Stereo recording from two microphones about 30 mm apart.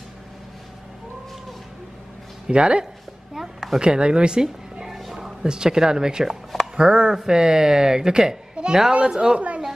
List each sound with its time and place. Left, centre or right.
2.4 s speech: right
3.3 s a sound: centre
3.8 s speech: right
4.4 s music: centre
4.9 s music: centre
5.2 s speech: right
6.2 s a sound: centre
6.8 s speech: right
8.6 s a sound: right
9.0 s speech: right